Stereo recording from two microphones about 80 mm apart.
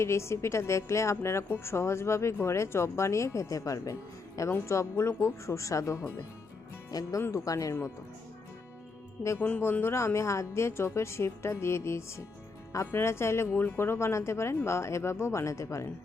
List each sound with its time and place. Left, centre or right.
0.0 s a woman's voice: left
6.9 s speech: left
9.4 s a woman's voice: left